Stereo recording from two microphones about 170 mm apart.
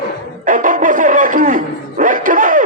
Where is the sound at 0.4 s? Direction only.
50° right (ahead or behind).